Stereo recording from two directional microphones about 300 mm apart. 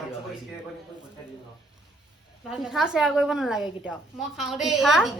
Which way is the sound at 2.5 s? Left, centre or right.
Centre.